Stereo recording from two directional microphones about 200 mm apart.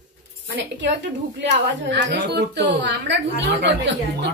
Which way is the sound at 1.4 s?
60° right (ahead or behind).